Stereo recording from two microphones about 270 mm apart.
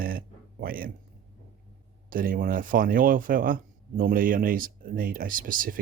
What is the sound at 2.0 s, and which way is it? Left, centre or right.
Speech, right.